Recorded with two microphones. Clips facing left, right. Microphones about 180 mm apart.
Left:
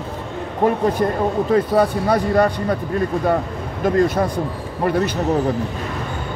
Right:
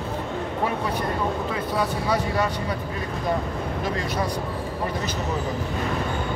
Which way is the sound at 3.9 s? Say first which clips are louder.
Left 12 dB; 50° left (ahead or behind).